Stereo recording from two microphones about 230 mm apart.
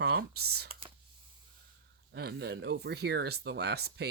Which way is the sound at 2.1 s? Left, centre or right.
Right.